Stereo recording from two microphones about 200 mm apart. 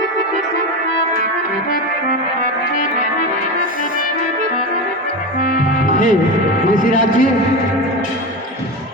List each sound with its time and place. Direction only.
5.4 s music: 45° left (ahead or behind)
6.7 s speech: 40° left (ahead or behind)